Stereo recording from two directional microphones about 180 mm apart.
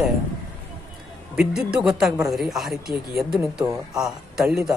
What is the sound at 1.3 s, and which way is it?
Speech, 5° right (ahead or behind).